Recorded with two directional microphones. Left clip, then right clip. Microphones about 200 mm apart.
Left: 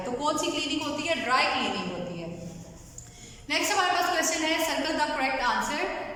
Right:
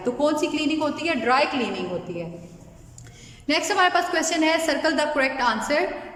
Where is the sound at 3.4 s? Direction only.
55° right (ahead or behind).